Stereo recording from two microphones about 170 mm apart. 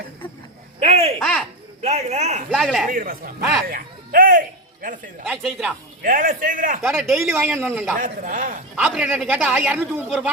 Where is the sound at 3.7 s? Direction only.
55° right (ahead or behind).